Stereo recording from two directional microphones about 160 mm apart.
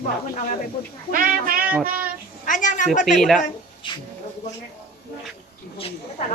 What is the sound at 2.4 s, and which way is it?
Speech, 55° left (ahead or behind).